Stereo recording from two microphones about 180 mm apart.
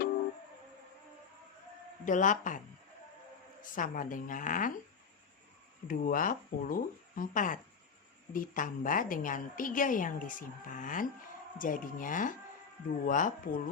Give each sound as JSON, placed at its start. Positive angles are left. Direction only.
{"t": 2.0, "sound": "a woman's voice", "side_deg": 45}
{"t": 3.6, "sound": "a woman's voice", "side_deg": 50}
{"t": 5.9, "sound": "a woman's voice", "side_deg": 50}